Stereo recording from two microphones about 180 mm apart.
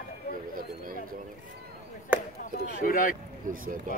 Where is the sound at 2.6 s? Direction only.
50° left (ahead or behind).